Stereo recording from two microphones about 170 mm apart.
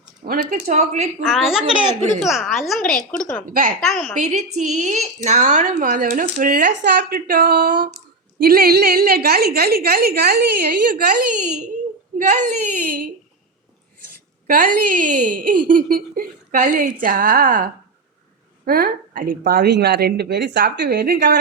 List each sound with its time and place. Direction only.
0.3 s speech: 50° right (ahead or behind)
1.2 s a woman's voice: centre (ahead or behind)
3.4 s a woman's voice: 55° right (ahead or behind)
3.8 s a woman's voice: 5° left (ahead or behind)
4.2 s a woman's voice: 45° right (ahead or behind)
14.4 s a woman's voice: 55° right (ahead or behind)
19.5 s a woman's voice: 70° right (ahead or behind)